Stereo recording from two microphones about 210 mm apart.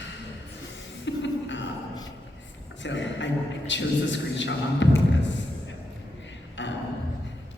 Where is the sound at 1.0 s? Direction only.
60° left (ahead or behind).